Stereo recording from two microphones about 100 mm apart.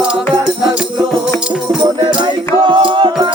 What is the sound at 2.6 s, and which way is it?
Music, 55° right (ahead or behind).